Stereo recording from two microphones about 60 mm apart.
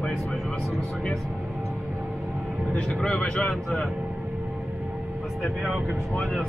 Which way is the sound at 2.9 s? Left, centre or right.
Centre.